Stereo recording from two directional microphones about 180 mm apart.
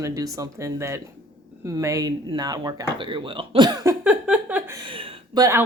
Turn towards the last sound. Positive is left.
turn(degrees=-15)  # may be behind; listen again after turning